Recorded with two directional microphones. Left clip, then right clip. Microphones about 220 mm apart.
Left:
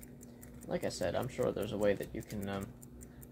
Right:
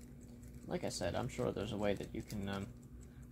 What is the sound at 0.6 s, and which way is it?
Speech, 20° right (ahead or behind).